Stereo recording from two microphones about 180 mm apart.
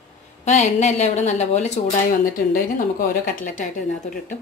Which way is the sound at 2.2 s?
50° left (ahead or behind).